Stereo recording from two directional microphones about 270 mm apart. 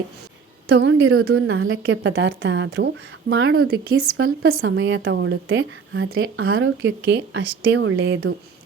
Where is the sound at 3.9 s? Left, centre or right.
Right.